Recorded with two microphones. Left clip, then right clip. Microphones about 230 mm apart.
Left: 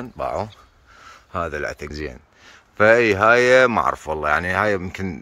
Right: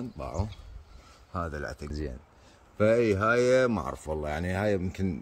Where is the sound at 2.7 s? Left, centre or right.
Centre.